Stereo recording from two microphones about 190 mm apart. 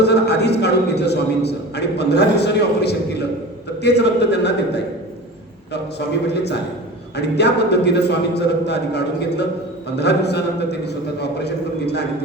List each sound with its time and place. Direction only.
0.0 s a man's voice: 60° left (ahead or behind)
7.2 s a man's voice: 60° left (ahead or behind)